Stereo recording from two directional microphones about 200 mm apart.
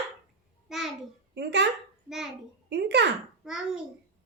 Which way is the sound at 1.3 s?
60° right (ahead or behind).